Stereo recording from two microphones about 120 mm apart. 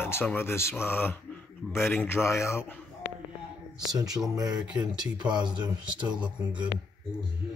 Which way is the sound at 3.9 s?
30° right (ahead or behind).